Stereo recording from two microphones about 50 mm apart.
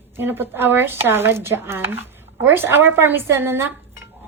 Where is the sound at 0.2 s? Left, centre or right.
Right.